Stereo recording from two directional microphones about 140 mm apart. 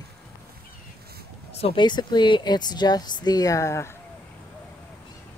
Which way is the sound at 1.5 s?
45° left (ahead or behind).